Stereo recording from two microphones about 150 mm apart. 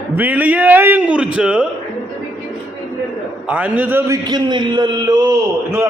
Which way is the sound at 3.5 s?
10° right (ahead or behind).